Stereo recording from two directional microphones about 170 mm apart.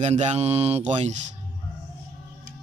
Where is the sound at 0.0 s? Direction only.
40° right (ahead or behind).